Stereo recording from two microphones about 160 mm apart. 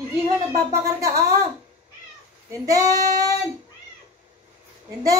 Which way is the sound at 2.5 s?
20° right (ahead or behind).